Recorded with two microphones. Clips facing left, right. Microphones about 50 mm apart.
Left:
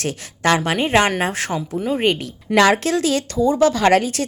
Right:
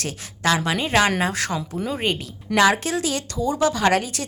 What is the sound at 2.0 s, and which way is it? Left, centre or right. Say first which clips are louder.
Speech: left 5 dB; left.